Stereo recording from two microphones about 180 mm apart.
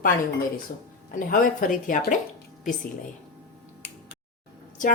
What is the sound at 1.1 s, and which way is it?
A woman's voice, 50° left (ahead or behind).